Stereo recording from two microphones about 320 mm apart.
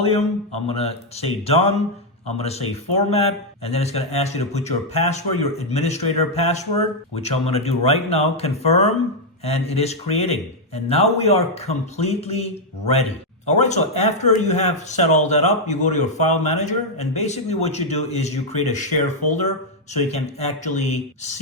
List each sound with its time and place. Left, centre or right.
0.0 s a man's voice: centre